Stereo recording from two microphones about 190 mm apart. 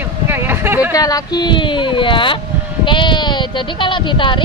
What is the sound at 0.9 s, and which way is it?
Speech, 20° left (ahead or behind).